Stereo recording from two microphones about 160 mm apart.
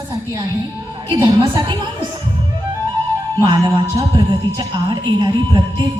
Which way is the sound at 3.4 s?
25° right (ahead or behind).